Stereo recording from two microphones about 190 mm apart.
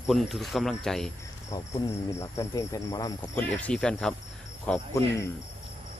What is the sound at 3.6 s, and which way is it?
Speech, 5° left (ahead or behind).